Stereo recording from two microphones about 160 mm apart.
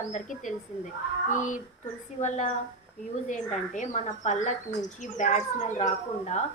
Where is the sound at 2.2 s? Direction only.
45° left (ahead or behind).